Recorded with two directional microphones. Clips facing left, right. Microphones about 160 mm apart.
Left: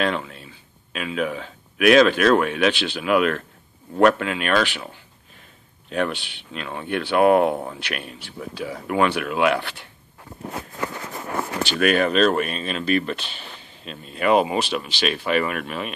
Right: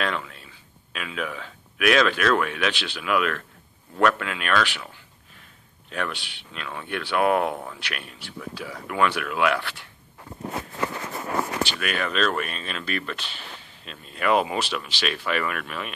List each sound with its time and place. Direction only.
0.0 s speech: 25° left (ahead or behind)
5.9 s speech: 30° left (ahead or behind)
6.1 s speech: 35° right (ahead or behind)
6.5 s speech: 30° left (ahead or behind)
11.8 s speech: 40° left (ahead or behind)